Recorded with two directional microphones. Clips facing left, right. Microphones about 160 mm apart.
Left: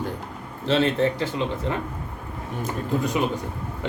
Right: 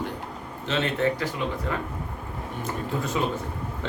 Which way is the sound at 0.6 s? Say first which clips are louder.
Left 4 dB; 35° left (ahead or behind).